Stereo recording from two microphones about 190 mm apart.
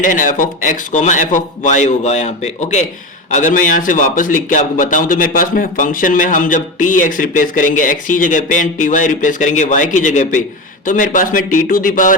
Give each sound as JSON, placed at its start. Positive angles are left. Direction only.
{"t": 0.0, "sound": "a man's voice", "side_deg": 45}